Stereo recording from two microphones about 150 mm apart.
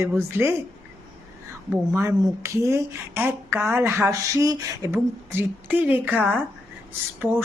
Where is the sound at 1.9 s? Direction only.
20° right (ahead or behind).